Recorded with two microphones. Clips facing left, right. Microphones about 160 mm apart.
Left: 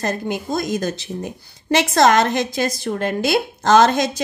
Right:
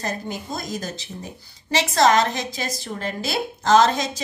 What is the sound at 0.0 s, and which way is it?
A woman's voice, 75° left (ahead or behind).